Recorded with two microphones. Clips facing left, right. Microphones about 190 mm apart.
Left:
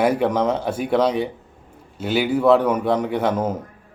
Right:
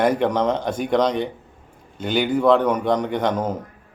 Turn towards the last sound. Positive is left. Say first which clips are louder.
# left 1 dB
turn(degrees=10)  # may be behind; listen again after turning